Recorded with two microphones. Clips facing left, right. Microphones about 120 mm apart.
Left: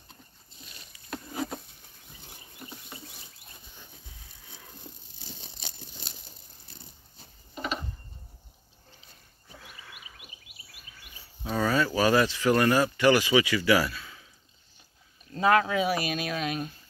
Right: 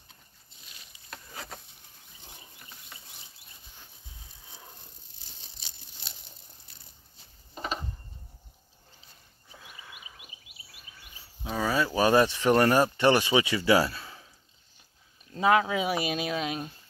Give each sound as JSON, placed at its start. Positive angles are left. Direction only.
{"t": 5.6, "sound": "tearing", "side_deg": 50}
{"t": 6.7, "sound": "dog", "side_deg": 35}
{"t": 7.5, "sound": "a sound", "side_deg": -35}
{"t": 9.6, "sound": "a sound", "side_deg": -20}
{"t": 11.5, "sound": "speech", "side_deg": -10}
{"t": 15.3, "sound": "speech", "side_deg": -10}